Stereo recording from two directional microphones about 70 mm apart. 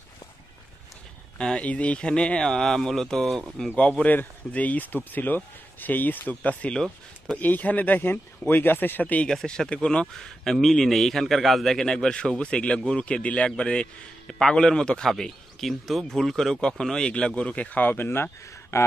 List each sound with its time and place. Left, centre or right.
1.4 s speech: centre
4.0 s speech: left
9.3 s speech: centre; by 18.8 s left